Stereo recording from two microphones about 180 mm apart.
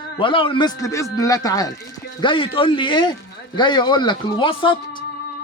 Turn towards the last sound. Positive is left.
turn(degrees=30)  # may be behind; listen again after turning